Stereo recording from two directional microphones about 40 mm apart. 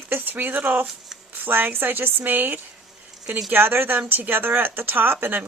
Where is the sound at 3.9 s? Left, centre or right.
Right.